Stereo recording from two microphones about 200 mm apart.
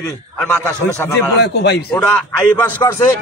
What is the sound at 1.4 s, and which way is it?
Speech, 60° left (ahead or behind).